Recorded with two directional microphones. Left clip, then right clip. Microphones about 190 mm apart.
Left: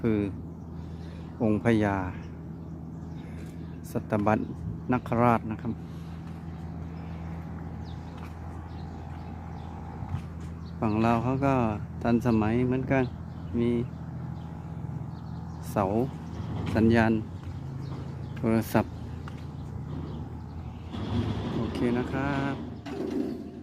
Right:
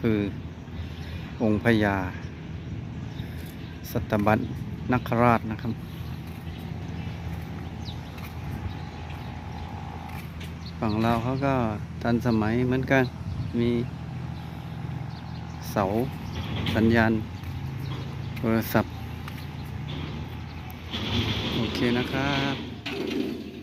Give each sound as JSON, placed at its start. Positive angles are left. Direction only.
{"t": 0.0, "sound": "speech", "side_deg": 5}
{"t": 1.4, "sound": "speech", "side_deg": 5}
{"t": 3.9, "sound": "speech", "side_deg": 5}
{"t": 10.9, "sound": "speech", "side_deg": 15}
{"t": 15.7, "sound": "speech", "side_deg": 10}
{"t": 18.4, "sound": "speech", "side_deg": 10}
{"t": 20.9, "sound": "vehicle", "side_deg": 40}
{"t": 21.6, "sound": "speech", "side_deg": 5}
{"t": 22.9, "sound": "a sound", "side_deg": 35}